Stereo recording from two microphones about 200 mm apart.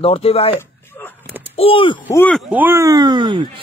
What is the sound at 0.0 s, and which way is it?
Speech, 30° left (ahead or behind).